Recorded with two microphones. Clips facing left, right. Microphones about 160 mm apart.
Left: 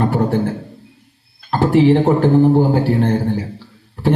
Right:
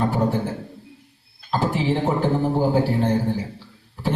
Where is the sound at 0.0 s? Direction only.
65° left (ahead or behind).